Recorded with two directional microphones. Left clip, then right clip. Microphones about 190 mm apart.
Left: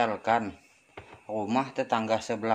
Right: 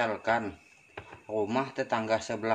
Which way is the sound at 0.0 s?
30° left (ahead or behind).